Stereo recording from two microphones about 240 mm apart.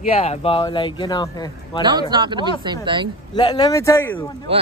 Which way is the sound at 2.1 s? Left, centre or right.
Centre.